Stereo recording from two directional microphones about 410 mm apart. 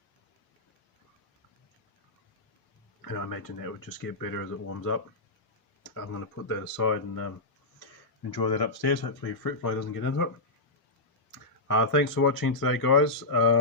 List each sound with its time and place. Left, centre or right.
3.0 s speech: left
6.5 s speech: left
8.3 s speech: left
11.7 s speech: left